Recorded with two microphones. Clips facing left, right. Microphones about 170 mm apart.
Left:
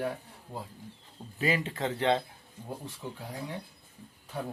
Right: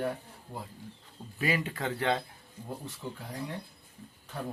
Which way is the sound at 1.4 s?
25° left (ahead or behind).